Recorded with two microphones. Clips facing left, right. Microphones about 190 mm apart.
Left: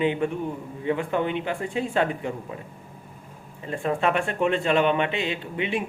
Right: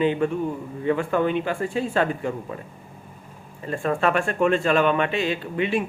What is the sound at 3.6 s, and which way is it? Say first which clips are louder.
A man's voice: right 2 dB; 20° left (ahead or behind).